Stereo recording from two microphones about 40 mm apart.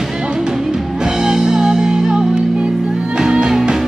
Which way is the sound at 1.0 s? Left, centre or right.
Centre.